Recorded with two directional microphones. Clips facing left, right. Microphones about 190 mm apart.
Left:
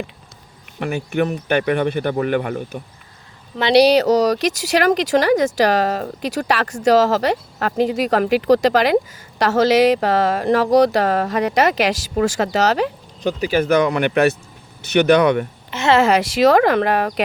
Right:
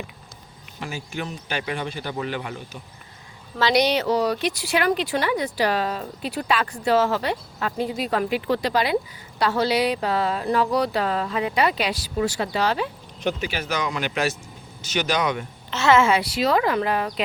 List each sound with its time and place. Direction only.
0.8 s a man's voice: 60° left (ahead or behind)
3.6 s speech: 30° left (ahead or behind)
4.3 s speech: 90° left
13.4 s a man's voice: 50° left (ahead or behind)
15.7 s a woman's voice: 10° left (ahead or behind)
16.0 s speech: 85° left; by 17.1 s 70° left (ahead or behind)